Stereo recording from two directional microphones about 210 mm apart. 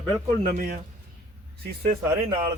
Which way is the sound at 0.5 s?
45° right (ahead or behind).